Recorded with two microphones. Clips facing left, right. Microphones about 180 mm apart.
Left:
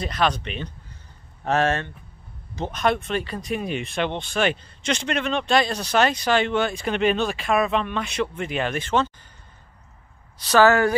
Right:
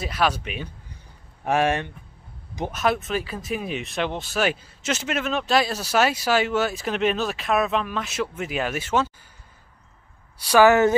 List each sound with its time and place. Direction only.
0.0 s speech: 5° right (ahead or behind)
10.4 s speech: 15° right (ahead or behind)